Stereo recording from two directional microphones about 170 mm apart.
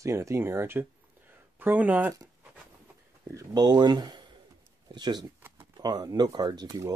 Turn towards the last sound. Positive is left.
turn(degrees=-20)  # may be behind; listen again after turning